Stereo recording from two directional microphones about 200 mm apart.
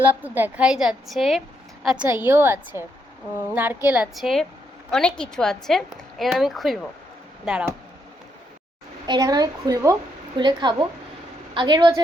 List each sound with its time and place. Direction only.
0.0 s a woman's voice: 10° right (ahead or behind)
9.0 s a woman's voice: 20° right (ahead or behind)